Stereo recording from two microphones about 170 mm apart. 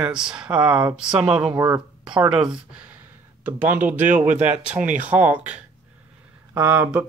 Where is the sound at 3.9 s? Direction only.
50° right (ahead or behind).